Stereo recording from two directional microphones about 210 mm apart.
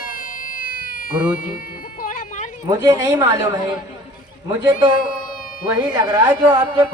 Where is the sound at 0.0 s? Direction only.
40° left (ahead or behind).